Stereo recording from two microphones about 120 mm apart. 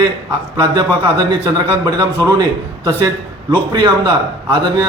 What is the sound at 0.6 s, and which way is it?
A man's voice, 30° right (ahead or behind).